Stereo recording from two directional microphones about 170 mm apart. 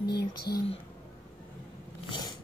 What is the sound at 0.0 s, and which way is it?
Speech, 70° left (ahead or behind).